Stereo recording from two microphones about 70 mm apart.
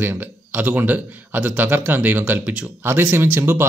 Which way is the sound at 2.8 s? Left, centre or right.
Right.